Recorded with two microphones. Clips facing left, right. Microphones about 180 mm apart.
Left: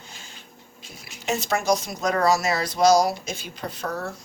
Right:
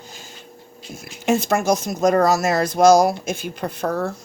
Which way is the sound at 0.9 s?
50° right (ahead or behind).